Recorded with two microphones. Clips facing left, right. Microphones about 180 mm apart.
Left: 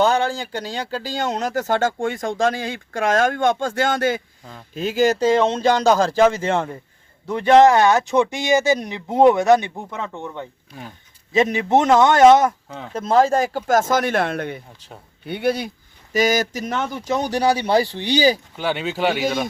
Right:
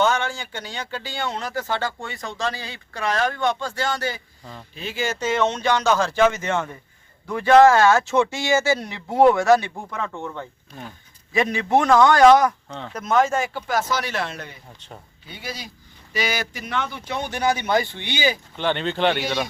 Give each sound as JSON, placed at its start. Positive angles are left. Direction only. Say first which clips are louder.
{"t": 0.0, "sound": "speech", "louder": "left 4 dB", "side_deg": 35}
{"t": 4.7, "sound": "speech", "louder": "left 10 dB", "side_deg": 40}
{"t": 7.3, "sound": "speech", "louder": "left 1 dB", "side_deg": 20}
{"t": 12.6, "sound": "speech", "louder": "even", "side_deg": 5}
{"t": 12.9, "sound": "speech", "louder": "left 4 dB", "side_deg": 30}
{"t": 16.1, "sound": "speech", "louder": "left 8 dB", "side_deg": 45}
{"t": 18.5, "sound": "speech", "louder": "even", "side_deg": 5}